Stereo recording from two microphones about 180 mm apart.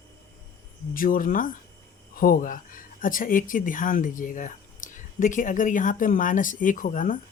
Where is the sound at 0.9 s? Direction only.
50° left (ahead or behind).